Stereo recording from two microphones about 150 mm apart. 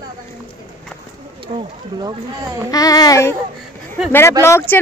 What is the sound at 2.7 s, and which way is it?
Speech, 25° left (ahead or behind).